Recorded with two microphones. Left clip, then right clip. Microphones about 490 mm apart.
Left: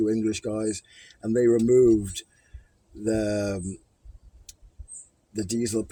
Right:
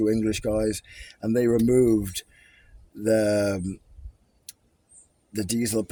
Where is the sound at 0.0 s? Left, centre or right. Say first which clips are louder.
Right 1 dB; right.